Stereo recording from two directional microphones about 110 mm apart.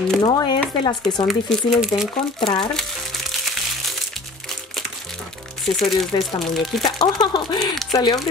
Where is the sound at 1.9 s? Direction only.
30° left (ahead or behind).